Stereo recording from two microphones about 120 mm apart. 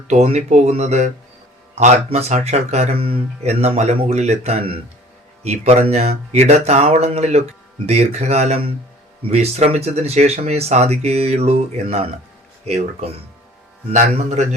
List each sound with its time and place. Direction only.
0.1 s speech: 65° right (ahead or behind)
13.9 s a man's voice: 85° right